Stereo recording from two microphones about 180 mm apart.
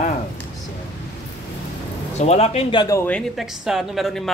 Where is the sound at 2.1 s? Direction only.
35° left (ahead or behind); by 3.1 s 20° left (ahead or behind).